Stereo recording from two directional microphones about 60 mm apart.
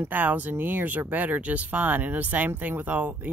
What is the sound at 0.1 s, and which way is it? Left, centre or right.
Speech, right.